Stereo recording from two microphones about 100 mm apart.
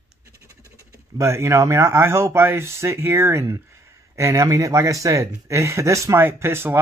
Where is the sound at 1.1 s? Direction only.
30° right (ahead or behind).